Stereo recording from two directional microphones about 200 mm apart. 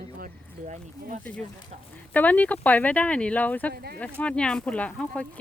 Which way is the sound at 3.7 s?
50° right (ahead or behind).